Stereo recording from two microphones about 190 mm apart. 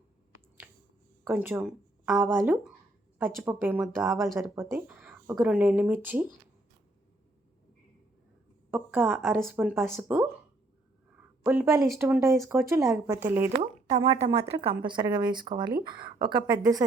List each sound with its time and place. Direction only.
0.6 s a sound: 10° right (ahead or behind)
1.2 s speech: 10° right (ahead or behind)
8.7 s a woman's voice: 10° right (ahead or behind)
11.4 s speech: 15° right (ahead or behind)
13.9 s a woman's voice: 25° right (ahead or behind)